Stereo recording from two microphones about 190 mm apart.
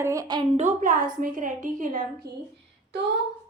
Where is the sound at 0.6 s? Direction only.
40° right (ahead or behind).